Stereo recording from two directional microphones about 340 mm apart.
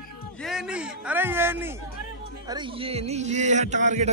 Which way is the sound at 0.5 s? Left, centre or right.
Centre.